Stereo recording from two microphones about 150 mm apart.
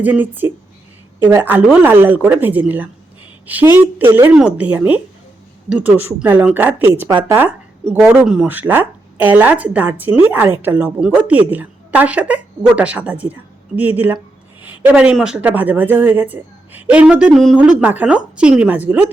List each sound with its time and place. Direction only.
0.0 s speech: 10° right (ahead or behind)